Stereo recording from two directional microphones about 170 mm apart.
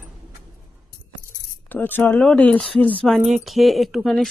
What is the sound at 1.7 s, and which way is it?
Speech, 10° left (ahead or behind).